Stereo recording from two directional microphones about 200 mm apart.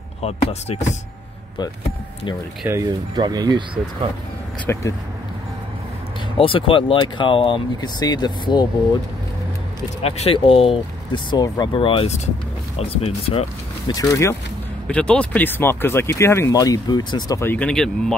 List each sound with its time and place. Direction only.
0.2 s speech: 30° left (ahead or behind)
2.6 s speech: 15° right (ahead or behind)
4.7 s speech: 10° left (ahead or behind)
6.3 s speech: 25° left (ahead or behind)
10.0 s speech: 30° left (ahead or behind)
14.9 s speech: 5° left (ahead or behind)